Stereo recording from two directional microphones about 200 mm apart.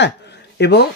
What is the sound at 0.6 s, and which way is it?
Speech, 55° left (ahead or behind).